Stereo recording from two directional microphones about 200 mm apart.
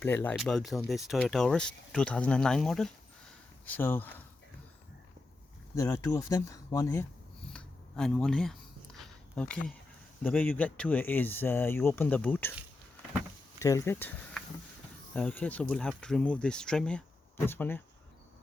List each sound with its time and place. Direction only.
0.0 s speech: 10° left (ahead or behind)
5.7 s speech: 15° left (ahead or behind)
7.5 s a sound: 5° left (ahead or behind)
10.2 s speech: 10° left (ahead or behind)
13.6 s speech: 15° left (ahead or behind)
15.1 s speech: 5° left (ahead or behind)